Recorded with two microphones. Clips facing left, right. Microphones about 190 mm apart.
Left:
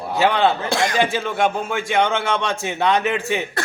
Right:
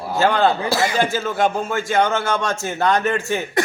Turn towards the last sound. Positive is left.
turn(degrees=0)  # may be behind; listen again after turning